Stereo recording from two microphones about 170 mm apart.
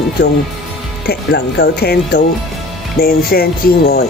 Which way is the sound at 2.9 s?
65° left (ahead or behind).